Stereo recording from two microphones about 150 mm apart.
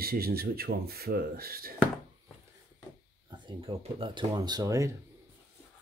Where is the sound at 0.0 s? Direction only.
90° right.